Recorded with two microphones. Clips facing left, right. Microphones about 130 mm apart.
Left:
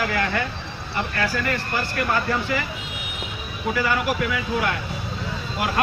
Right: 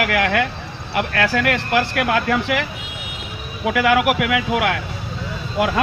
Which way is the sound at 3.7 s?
90° right.